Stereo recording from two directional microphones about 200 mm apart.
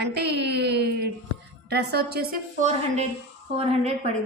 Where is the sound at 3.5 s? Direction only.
30° right (ahead or behind).